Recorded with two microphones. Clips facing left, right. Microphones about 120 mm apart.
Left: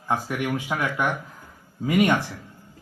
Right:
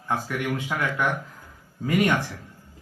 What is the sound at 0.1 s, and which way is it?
A man's voice, 15° left (ahead or behind).